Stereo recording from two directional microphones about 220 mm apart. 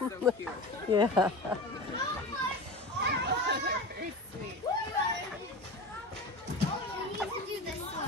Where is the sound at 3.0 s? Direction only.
50° right (ahead or behind).